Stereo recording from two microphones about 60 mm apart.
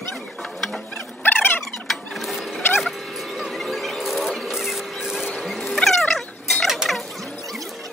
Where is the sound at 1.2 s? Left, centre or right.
Left.